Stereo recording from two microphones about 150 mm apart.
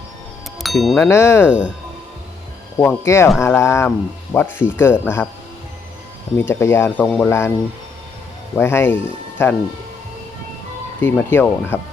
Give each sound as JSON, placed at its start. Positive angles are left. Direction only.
{"t": 0.6, "sound": "music", "side_deg": 0}
{"t": 0.9, "sound": "speech", "side_deg": 15}
{"t": 1.5, "sound": "speech", "side_deg": -10}
{"t": 2.8, "sound": "speech", "side_deg": 15}
{"t": 6.3, "sound": "speech", "side_deg": 15}
{"t": 8.5, "sound": "speech", "side_deg": 15}
{"t": 11.0, "sound": "speech", "side_deg": 15}